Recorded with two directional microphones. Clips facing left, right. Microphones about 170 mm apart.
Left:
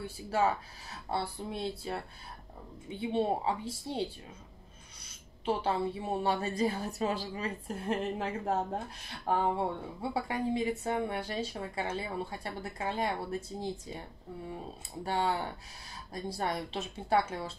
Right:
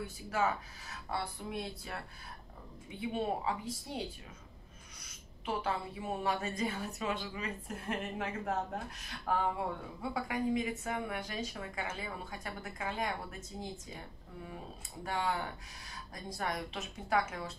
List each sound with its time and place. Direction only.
0.0 s speech: 30° left (ahead or behind)
5.0 s a woman's voice: 30° left (ahead or behind)
15.0 s a woman's voice: 30° left (ahead or behind)